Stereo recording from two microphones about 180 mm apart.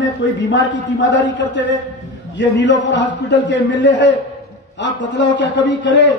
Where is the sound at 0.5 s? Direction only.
85° left.